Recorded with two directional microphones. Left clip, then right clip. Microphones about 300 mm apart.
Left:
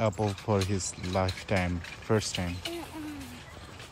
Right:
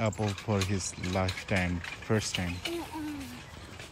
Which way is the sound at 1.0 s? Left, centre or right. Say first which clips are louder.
Left 1 dB; centre.